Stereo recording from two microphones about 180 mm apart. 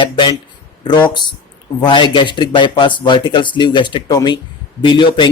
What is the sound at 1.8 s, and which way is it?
Speech, 25° left (ahead or behind).